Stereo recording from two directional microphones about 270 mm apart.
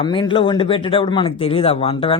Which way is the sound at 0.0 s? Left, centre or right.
Centre.